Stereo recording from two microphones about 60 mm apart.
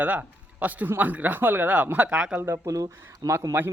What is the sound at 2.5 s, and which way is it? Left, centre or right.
Speech, right.